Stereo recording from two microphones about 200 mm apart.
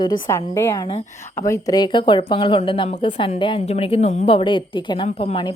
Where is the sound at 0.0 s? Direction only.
20° left (ahead or behind).